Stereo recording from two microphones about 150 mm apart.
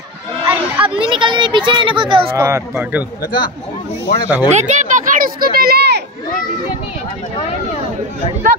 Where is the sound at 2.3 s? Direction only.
15° right (ahead or behind).